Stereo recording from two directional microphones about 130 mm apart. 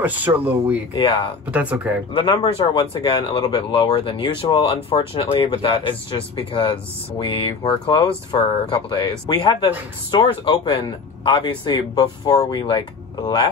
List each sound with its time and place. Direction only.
0.0 s speech: 15° right (ahead or behind)
2.1 s speech: 40° left (ahead or behind)
12.3 s speech: 30° left (ahead or behind)